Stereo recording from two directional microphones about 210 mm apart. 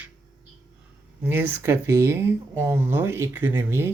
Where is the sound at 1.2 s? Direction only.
10° right (ahead or behind).